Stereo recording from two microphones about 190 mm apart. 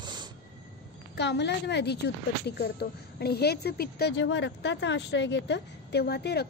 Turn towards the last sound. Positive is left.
turn(degrees=60)  # may be behind; listen again after turning